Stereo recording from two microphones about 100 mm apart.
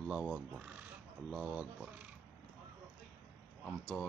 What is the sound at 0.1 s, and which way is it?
Speech, 10° right (ahead or behind).